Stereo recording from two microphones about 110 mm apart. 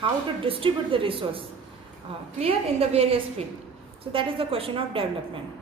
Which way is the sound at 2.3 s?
65° right (ahead or behind).